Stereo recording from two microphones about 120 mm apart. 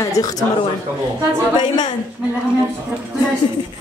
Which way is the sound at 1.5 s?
35° left (ahead or behind).